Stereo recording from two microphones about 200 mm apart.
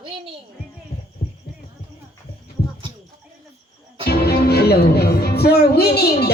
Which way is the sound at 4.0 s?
50° left (ahead or behind).